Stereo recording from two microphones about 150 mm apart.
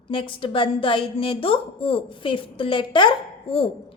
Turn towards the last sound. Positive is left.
turn(degrees=35)  # may be behind; listen again after turning